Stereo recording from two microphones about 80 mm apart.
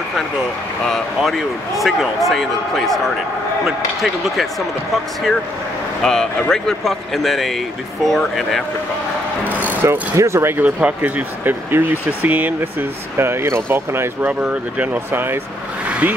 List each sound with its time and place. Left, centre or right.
0.8 s speech: centre
6.0 s speech: centre
9.8 s speech: right
10.6 s speech: centre
15.9 s vehicle: centre